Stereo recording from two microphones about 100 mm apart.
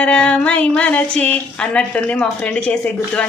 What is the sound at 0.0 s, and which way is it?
A woman's voice, 10° left (ahead or behind).